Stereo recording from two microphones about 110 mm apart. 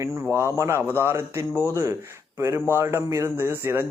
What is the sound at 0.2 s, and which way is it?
Speech, 25° right (ahead or behind).